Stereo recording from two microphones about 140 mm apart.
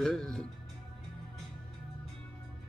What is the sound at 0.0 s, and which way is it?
Music, 5° left (ahead or behind).